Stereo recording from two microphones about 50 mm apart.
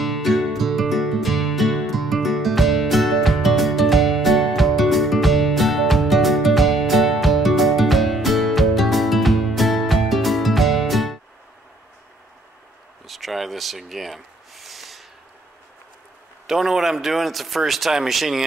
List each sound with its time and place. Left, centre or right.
0.0 s music: centre
13.0 s a sound: centre
16.4 s a man's voice: centre